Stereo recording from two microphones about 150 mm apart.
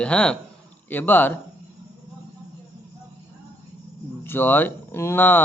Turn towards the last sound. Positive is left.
turn(degrees=15)  # may be behind; listen again after turning